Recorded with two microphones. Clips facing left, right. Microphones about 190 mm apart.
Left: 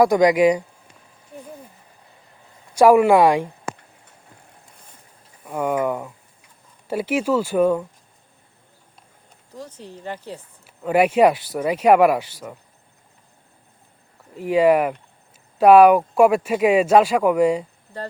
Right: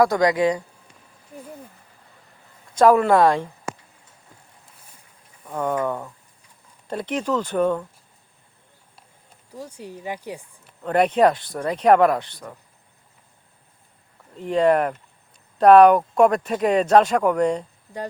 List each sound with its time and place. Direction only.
0.0 s speech: 20° left (ahead or behind)
2.7 s speech: 10° left (ahead or behind)
5.5 s speech: 10° left (ahead or behind)
9.5 s speech: 10° right (ahead or behind)
10.6 s speech: 5° left (ahead or behind)
14.3 s speech: 5° left (ahead or behind)